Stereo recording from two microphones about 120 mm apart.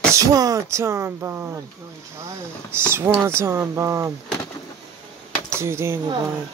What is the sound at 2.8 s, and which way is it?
Speech, 20° right (ahead or behind).